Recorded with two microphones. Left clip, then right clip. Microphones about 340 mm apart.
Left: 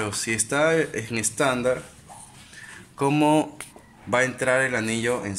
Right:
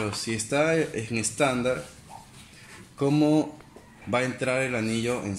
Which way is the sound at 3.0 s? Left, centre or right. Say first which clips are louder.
Left 3 dB; left.